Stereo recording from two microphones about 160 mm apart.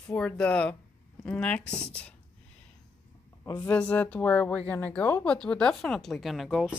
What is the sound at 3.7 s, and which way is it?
Speech, 10° left (ahead or behind).